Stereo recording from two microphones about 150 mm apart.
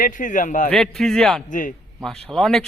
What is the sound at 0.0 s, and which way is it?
Speech, 60° left (ahead or behind).